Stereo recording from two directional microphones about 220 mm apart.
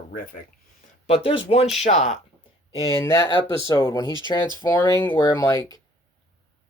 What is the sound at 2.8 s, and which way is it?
Speech, 15° left (ahead or behind).